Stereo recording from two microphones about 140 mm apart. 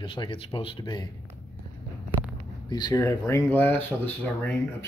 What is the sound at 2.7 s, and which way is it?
Speech, 25° left (ahead or behind).